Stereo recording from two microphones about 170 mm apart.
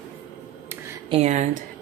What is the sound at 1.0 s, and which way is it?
Speech, 35° right (ahead or behind).